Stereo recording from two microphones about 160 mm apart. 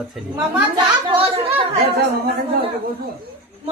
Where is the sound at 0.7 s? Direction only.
30° right (ahead or behind).